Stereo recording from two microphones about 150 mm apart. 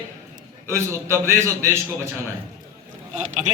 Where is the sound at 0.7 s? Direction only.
15° right (ahead or behind).